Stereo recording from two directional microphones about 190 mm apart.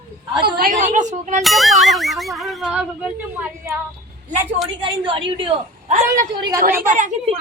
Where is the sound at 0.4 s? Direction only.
50° right (ahead or behind).